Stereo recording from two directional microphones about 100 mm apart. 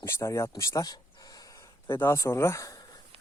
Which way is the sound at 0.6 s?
35° left (ahead or behind).